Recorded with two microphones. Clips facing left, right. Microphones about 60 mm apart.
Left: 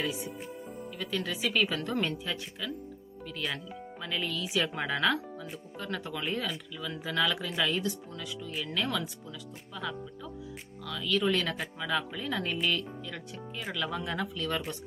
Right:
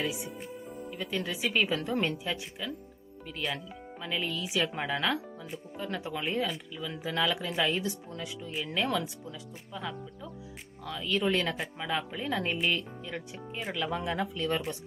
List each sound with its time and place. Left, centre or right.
0.9 s speech: centre
10.8 s speech: right